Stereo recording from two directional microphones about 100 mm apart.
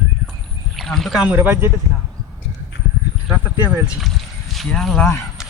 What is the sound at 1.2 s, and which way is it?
Speech, 15° right (ahead or behind).